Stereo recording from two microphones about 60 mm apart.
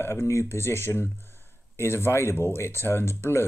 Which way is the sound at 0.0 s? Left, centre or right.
Left.